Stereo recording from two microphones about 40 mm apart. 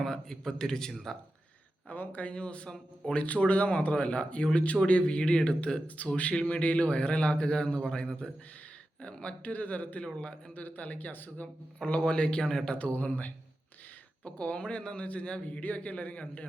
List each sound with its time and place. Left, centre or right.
0.0 s a man's voice: centre
1.9 s speech: left
2.3 s a man's voice: left
10.2 s a man's voice: left
10.5 s speech: left
11.9 s a man's voice: left
12.9 s speech: left
14.3 s a man's voice: left